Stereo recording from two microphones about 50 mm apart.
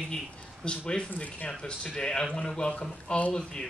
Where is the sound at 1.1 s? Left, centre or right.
Left.